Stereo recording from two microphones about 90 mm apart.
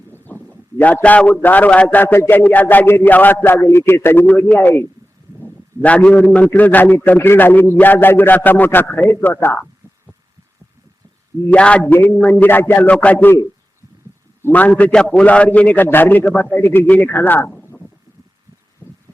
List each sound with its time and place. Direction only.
0.3 s a sound: 20° left (ahead or behind)
0.8 s a man's voice: 15° left (ahead or behind)
11.5 s a man's voice: 15° left (ahead or behind)
11.9 s a man's voice: 25° left (ahead or behind)
14.5 s a man's voice: 15° left (ahead or behind)
18.8 s a sound: 20° left (ahead or behind)